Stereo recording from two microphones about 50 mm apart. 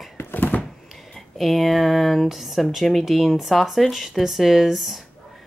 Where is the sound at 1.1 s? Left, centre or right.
Centre.